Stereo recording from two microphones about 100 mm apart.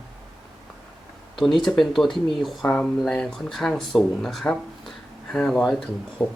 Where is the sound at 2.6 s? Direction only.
15° left (ahead or behind).